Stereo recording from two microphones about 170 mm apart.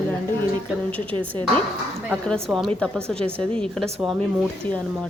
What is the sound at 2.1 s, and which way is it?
A woman's voice, centre (ahead or behind).